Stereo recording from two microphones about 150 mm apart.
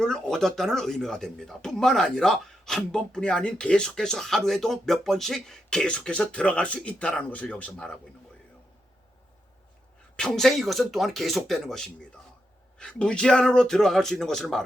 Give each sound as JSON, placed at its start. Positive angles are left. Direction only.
{"t": 0.0, "sound": "speech", "side_deg": 5}
{"t": 10.2, "sound": "speech", "side_deg": 5}